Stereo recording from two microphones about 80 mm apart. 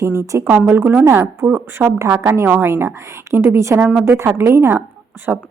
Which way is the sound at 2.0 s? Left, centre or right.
Right.